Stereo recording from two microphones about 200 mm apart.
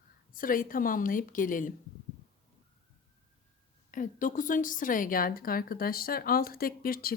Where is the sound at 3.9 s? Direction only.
40° left (ahead or behind).